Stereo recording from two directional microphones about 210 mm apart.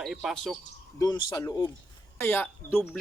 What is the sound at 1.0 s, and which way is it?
A man's voice, 20° left (ahead or behind).